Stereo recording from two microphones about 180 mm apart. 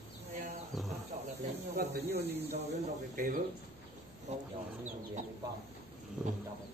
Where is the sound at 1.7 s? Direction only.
65° right (ahead or behind).